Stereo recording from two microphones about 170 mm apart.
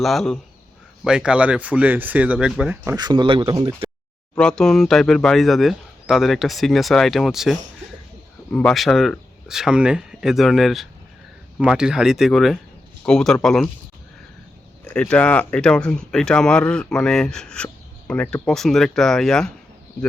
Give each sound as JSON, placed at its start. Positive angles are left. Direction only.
{"t": 0.0, "sound": "speech", "side_deg": 0}
{"t": 2.9, "sound": "speech", "side_deg": -25}
{"t": 4.4, "sound": "speech", "side_deg": 5}
{"t": 14.8, "sound": "speech", "side_deg": 5}